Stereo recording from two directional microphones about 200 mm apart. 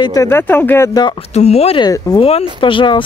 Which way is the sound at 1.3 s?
30° left (ahead or behind).